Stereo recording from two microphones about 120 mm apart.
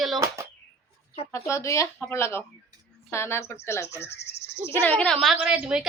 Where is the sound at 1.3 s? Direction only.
25° left (ahead or behind).